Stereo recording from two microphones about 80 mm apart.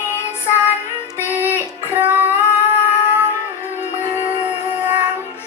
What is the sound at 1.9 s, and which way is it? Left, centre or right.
Child singing, right.